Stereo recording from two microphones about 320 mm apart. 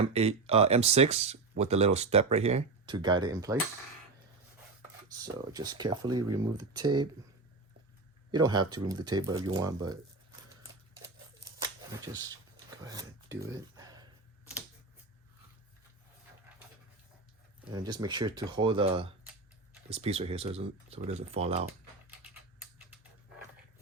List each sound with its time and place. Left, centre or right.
0.1 s speech: centre
5.1 s speech: centre
8.3 s speech: centre
11.6 s shuffling cards: centre
12.7 s a sound: centre
17.7 s speech: centre